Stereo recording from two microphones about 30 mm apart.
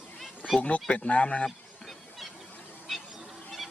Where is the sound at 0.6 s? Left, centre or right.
Left.